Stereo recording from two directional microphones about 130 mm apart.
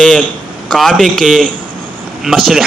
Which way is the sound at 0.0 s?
5° left (ahead or behind).